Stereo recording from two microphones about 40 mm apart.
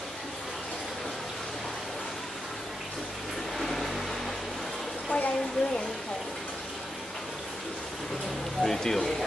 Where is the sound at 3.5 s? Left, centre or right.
Centre.